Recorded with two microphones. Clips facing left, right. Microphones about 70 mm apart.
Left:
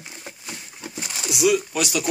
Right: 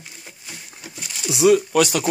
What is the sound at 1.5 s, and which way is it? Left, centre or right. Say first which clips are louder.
Speech: right 6 dB; right.